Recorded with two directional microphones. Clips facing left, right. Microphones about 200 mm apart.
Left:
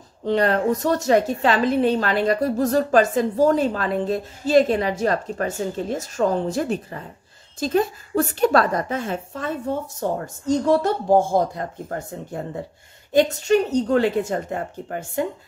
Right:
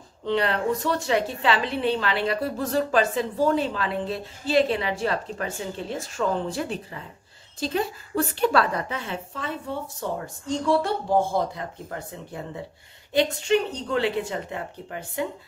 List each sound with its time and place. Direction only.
0.2 s a woman's voice: 40° left (ahead or behind)